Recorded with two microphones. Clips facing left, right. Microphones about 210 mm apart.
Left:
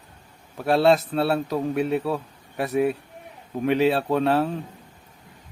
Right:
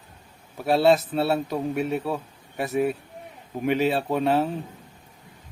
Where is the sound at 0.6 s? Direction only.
Centre (ahead or behind).